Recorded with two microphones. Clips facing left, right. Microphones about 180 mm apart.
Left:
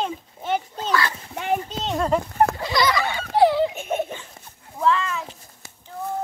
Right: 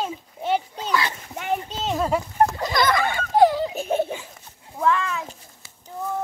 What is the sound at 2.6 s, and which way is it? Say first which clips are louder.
Giggle: right 1 dB; 50° right (ahead or behind).